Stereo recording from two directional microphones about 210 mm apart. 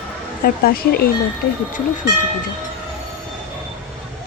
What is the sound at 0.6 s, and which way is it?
Bell, 45° left (ahead or behind).